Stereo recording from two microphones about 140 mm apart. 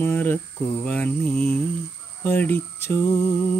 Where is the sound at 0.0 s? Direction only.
15° left (ahead or behind).